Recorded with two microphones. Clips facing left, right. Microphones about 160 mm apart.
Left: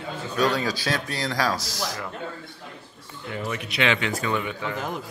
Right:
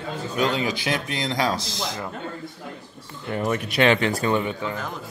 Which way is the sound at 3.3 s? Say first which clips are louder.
Right 6 dB; 50° right (ahead or behind).